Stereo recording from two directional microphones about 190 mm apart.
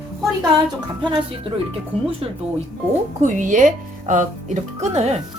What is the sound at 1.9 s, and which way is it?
Speech, 30° right (ahead or behind).